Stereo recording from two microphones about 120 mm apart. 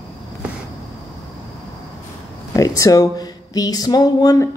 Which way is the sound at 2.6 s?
30° left (ahead or behind).